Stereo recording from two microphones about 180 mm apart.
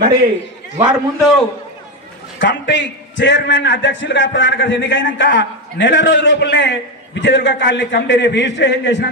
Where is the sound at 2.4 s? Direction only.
80° left.